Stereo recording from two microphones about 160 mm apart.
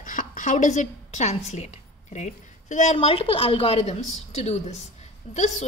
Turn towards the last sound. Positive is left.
turn(degrees=45)  # may be behind; listen again after turning